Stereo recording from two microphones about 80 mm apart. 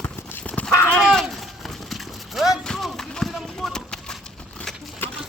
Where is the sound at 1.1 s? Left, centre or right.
Centre.